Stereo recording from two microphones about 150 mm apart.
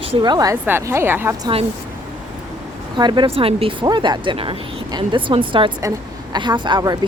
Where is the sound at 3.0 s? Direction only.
30° right (ahead or behind).